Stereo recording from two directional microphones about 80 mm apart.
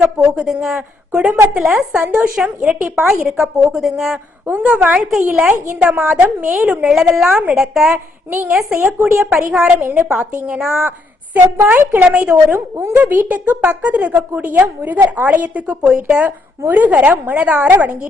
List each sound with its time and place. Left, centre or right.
0.3 s a woman's voice: centre
4.4 s a woman's voice: centre
8.7 s a woman's voice: right
9.2 s speech: centre
9.8 s a woman's voice: right
10.3 s speech: centre
11.3 s a woman's voice: right
12.5 s a woman's voice: right
13.0 s a woman's voice: right